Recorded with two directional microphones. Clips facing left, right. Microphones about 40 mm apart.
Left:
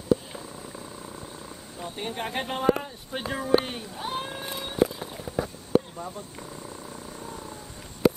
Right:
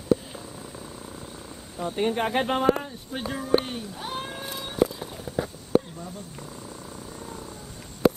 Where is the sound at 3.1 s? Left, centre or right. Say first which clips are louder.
Left 1 dB; centre.